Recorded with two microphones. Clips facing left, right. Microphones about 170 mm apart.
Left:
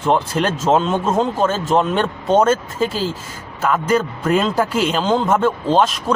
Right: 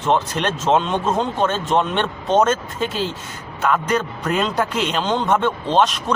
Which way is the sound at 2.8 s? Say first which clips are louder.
Left 3 dB; 35° left (ahead or behind).